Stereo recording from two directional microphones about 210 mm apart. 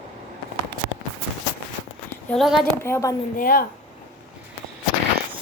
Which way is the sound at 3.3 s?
45° left (ahead or behind).